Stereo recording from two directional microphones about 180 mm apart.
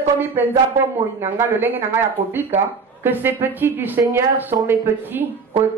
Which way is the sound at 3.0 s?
10° right (ahead or behind).